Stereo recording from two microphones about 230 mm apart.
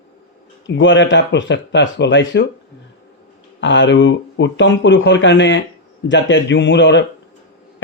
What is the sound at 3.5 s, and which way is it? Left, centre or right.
Speech, left.